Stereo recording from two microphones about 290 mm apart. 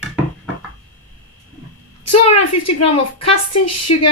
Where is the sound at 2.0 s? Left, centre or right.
Left.